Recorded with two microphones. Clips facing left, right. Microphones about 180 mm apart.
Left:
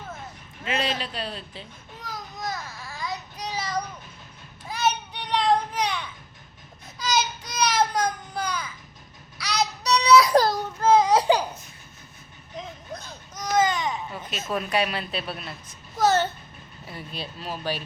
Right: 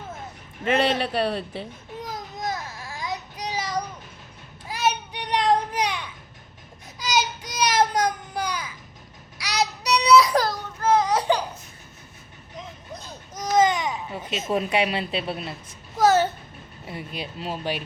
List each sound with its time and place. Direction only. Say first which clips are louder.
0.7 s a man's voice: right 6 dB; 60° right (ahead or behind)
2.0 s baby cry: right 2 dB; 20° right (ahead or behind)
4.7 s children playing: right 1 dB; 10° right (ahead or behind)
7.0 s a sound: right 1 dB; 15° right (ahead or behind)
9.4 s child singing: right 1 dB; 15° right (ahead or behind)
10.3 s a sound: left 3 dB; 25° left (ahead or behind)
13.3 s speech: right 3 dB; 20° right (ahead or behind)
16.0 s speech: right 3 dB; 10° right (ahead or behind)
16.8 s speech: right 3 dB; 20° right (ahead or behind)